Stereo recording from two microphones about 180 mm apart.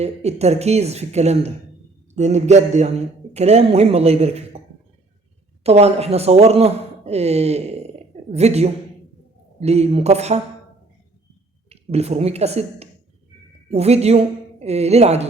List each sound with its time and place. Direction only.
0.0 s speech: 35° right (ahead or behind)
5.6 s speech: 35° right (ahead or behind)
11.7 s speech: 35° right (ahead or behind)